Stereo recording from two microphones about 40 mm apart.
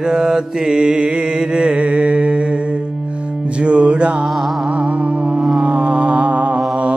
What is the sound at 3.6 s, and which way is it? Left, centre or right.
Music, right.